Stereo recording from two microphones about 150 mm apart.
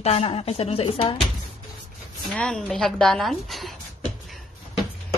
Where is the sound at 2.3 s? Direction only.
5° left (ahead or behind).